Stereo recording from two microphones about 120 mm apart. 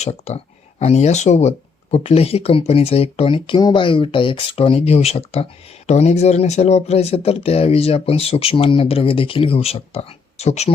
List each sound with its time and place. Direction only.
0.0 s speech: 60° left (ahead or behind)